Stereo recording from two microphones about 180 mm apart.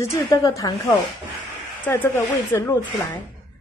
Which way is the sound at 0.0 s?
15° left (ahead or behind).